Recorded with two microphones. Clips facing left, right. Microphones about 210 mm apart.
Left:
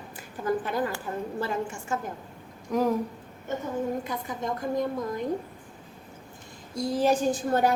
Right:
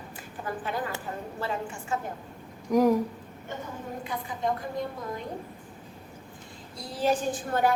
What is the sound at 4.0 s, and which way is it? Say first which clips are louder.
Speech: even; 45° left (ahead or behind).